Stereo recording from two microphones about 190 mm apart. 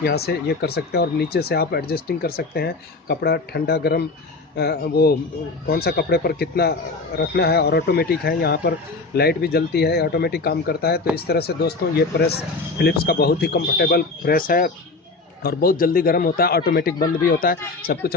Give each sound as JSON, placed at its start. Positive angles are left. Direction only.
{"t": 0.0, "sound": "a man's voice", "side_deg": 60}